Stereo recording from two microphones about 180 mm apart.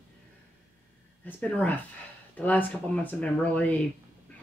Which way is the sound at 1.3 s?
10° left (ahead or behind).